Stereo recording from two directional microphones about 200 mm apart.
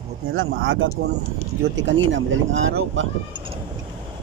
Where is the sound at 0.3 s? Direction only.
70° right (ahead or behind).